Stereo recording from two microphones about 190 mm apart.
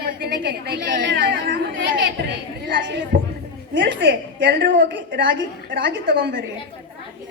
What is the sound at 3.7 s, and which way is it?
Speech, 80° right.